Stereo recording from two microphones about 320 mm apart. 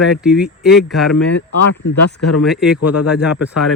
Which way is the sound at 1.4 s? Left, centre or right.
Left.